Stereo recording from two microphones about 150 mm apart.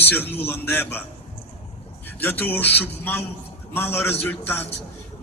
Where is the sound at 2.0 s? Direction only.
15° left (ahead or behind).